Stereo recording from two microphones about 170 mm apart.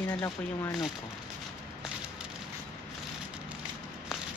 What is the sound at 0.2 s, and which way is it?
Speech, 20° left (ahead or behind).